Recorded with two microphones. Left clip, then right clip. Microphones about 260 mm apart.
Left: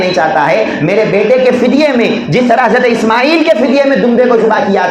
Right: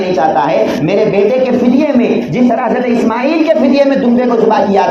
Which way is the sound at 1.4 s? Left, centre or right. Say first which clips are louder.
Left 3 dB; left.